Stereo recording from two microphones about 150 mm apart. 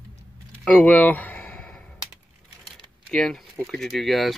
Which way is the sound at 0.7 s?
10° left (ahead or behind).